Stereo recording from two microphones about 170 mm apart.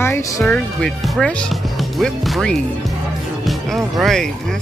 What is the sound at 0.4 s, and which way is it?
Speech, centre (ahead or behind).